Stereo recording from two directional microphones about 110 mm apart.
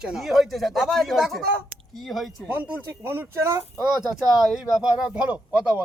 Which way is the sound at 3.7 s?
5° right (ahead or behind).